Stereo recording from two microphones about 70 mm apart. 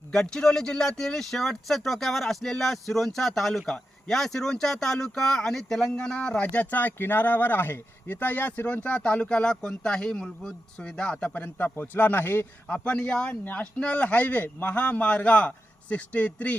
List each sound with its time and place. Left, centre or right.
0.1 s speech: centre
11.3 s a man's voice: left
12.6 s speech: centre
13.4 s a man's voice: left